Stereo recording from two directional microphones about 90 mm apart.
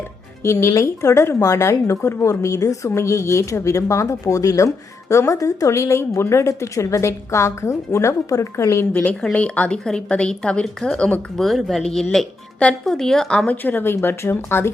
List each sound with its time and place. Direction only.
0.4 s a woman's voice: 30° left (ahead or behind)
8.9 s a woman's voice: 20° left (ahead or behind)
13.6 s speech: 20° left (ahead or behind)